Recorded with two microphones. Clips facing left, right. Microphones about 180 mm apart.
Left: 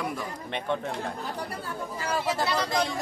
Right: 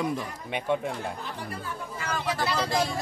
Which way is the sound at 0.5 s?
10° right (ahead or behind).